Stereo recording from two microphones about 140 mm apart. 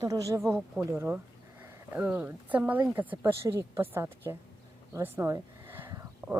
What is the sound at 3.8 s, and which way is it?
Speech, 15° right (ahead or behind).